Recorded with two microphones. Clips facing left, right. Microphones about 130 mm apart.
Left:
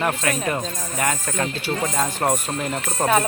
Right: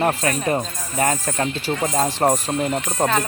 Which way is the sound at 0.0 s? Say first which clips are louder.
Right 2 dB; 35° right (ahead or behind).